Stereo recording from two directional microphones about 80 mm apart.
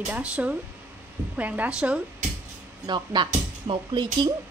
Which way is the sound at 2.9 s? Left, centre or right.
Right.